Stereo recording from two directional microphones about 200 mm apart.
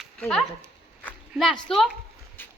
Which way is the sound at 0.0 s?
Centre (ahead or behind).